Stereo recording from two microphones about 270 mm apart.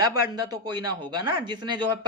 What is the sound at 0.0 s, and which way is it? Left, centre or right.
A man's voice, centre.